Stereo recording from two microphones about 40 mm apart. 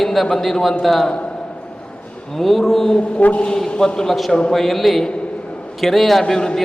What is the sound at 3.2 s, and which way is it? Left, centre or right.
Speech, left.